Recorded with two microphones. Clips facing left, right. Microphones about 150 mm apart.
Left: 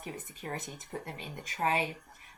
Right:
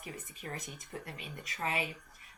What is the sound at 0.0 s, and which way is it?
A woman's voice, 30° left (ahead or behind).